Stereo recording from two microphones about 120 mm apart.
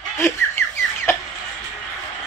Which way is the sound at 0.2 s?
15° left (ahead or behind).